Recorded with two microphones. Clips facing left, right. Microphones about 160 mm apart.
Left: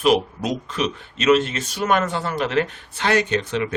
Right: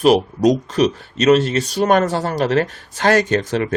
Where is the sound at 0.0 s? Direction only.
40° right (ahead or behind).